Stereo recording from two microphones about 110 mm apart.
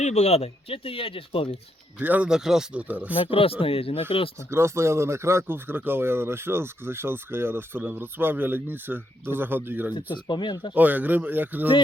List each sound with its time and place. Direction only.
0.0 s speech: 85° left; by 1.5 s 55° left (ahead or behind)
2.0 s speech: 15° right (ahead or behind)
2.8 s speech: 15° right (ahead or behind)
3.2 s speech: 55° left (ahead or behind)
4.4 s speech: 25° right (ahead or behind)
10.1 s speech: 45° left (ahead or behind)
10.8 s speech: 15° right (ahead or behind)